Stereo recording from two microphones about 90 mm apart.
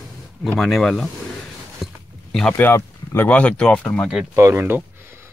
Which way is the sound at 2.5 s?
25° left (ahead or behind).